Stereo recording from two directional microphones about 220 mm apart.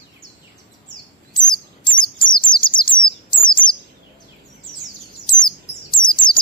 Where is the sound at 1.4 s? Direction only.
20° left (ahead or behind).